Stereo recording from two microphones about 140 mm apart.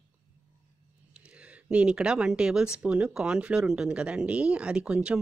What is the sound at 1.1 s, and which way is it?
Speech, 10° right (ahead or behind).